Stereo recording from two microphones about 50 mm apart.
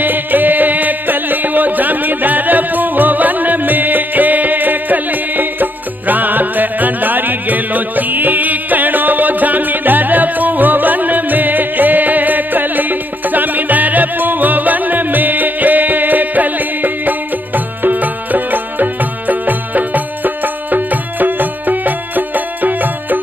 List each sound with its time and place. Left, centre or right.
0.0 s music: right